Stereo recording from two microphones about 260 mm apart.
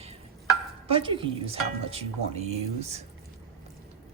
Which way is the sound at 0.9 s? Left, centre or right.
Centre.